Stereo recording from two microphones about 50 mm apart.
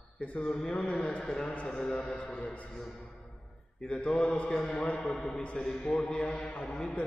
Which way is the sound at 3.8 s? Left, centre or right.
Left.